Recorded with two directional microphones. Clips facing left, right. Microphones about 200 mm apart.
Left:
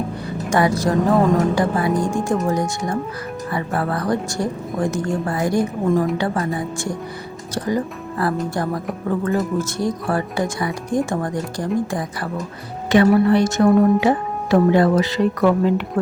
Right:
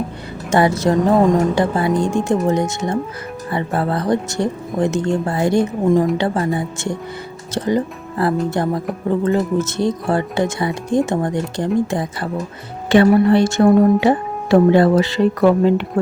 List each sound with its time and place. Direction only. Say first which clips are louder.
0.5 s speech: right 3 dB; 25° right (ahead or behind)